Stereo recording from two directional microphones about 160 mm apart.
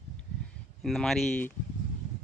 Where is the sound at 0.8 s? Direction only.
Centre (ahead or behind).